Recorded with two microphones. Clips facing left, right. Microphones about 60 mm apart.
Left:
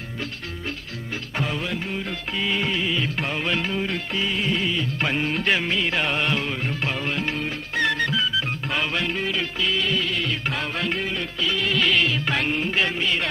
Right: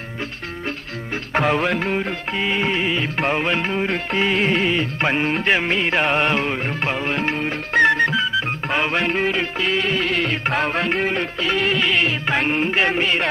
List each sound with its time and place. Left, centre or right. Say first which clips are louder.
1.3 s music: right 9 dB; right
2.0 s music: right 4 dB; right
4.2 s music: right 7 dB; right
4.9 s music: right 4 dB; right
11.8 s music: right 2 dB; right